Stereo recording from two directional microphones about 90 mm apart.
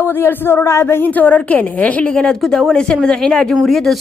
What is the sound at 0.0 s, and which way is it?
A woman's voice, 25° left (ahead or behind).